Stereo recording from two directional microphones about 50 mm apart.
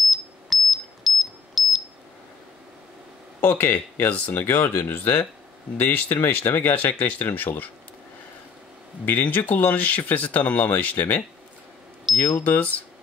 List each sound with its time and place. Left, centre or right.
0.0 s smoke detector: centre
3.3 s speech: left
4.1 s speech: left
4.5 s speech: left
9.0 s speech: left
12.4 s speech: left